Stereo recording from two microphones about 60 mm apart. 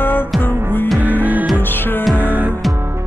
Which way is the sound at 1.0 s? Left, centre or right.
Right.